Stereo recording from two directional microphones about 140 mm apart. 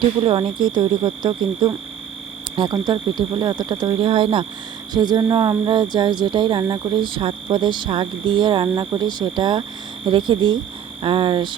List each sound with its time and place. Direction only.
0.2 s speech: 35° right (ahead or behind)